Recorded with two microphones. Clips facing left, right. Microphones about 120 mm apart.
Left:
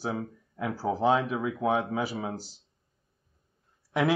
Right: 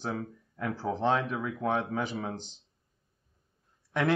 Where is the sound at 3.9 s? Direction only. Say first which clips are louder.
Left 2 dB; 5° left (ahead or behind).